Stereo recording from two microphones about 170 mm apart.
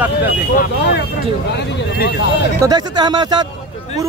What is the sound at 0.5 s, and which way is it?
Speech, 70° left (ahead or behind).